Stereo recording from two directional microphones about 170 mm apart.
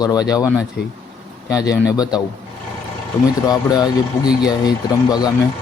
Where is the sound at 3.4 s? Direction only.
25° left (ahead or behind).